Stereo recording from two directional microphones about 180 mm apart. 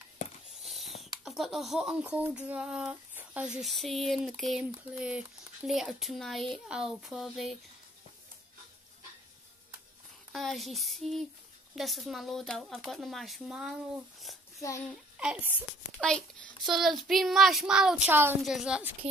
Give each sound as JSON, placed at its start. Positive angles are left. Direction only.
{"t": 0.7, "sound": "a sound", "side_deg": 0}
{"t": 1.2, "sound": "speech", "side_deg": 0}
{"t": 10.3, "sound": "speech", "side_deg": 0}
{"t": 14.9, "sound": "a child's voice", "side_deg": -5}
{"t": 16.0, "sound": "speech", "side_deg": 5}